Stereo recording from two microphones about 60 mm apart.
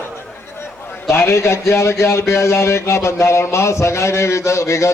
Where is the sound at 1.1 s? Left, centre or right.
Left.